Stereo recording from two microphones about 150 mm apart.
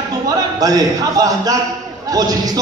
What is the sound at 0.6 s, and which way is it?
A man's voice, 25° right (ahead or behind).